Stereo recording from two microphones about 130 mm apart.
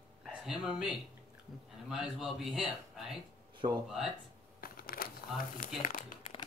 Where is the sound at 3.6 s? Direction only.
45° right (ahead or behind).